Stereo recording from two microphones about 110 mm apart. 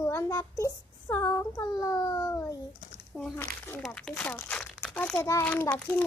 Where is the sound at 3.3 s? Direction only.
20° left (ahead or behind).